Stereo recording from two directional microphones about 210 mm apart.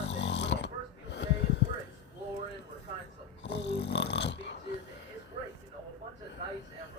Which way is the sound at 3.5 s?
55° left (ahead or behind).